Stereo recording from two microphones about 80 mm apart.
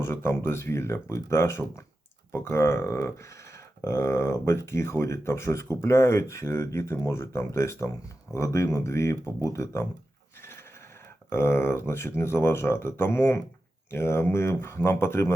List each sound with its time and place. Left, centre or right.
0.0 s speech: left
10.4 s a sound: left
11.3 s speech: left